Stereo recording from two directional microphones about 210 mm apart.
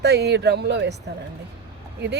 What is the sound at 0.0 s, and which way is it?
Speech, 50° right (ahead or behind).